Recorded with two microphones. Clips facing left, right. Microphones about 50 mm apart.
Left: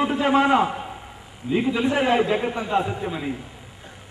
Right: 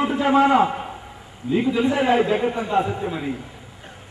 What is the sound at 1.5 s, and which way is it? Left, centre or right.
Speech, left.